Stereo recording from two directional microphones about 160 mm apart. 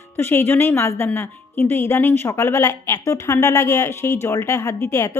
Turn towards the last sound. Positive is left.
turn(degrees=20)  # may be behind; listen again after turning